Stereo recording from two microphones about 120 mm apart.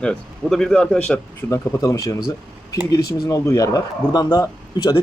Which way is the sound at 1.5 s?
25° left (ahead or behind).